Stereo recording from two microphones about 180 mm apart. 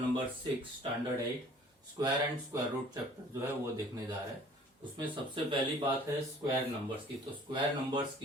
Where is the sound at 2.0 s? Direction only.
20° right (ahead or behind).